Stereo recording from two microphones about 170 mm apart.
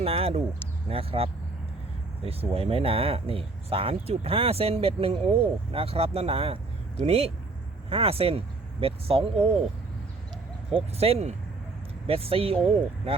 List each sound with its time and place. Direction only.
0.0 s speech: 35° right (ahead or behind)
10.8 s speech: 35° right (ahead or behind)